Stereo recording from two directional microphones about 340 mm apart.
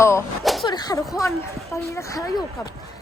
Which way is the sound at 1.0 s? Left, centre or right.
Centre.